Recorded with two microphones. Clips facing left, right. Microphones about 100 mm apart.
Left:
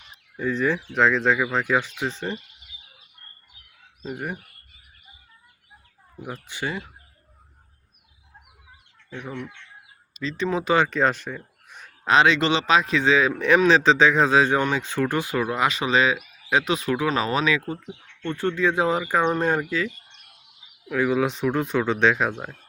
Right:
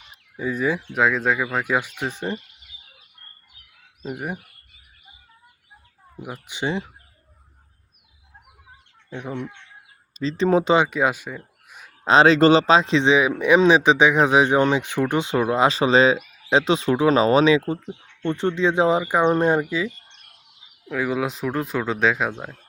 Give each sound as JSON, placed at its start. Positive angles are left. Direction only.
{"t": 0.3, "sound": "speech", "side_deg": -10}
{"t": 4.0, "sound": "speech", "side_deg": -10}
{"t": 6.2, "sound": "speech", "side_deg": -15}
{"t": 9.0, "sound": "speech", "side_deg": -20}
{"t": 10.2, "sound": "speech", "side_deg": -35}
{"t": 10.8, "sound": "speech", "side_deg": -10}
{"t": 12.0, "sound": "speech", "side_deg": -35}
{"t": 20.8, "sound": "speech", "side_deg": 0}